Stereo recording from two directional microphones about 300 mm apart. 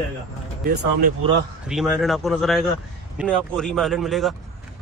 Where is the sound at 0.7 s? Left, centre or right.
Right.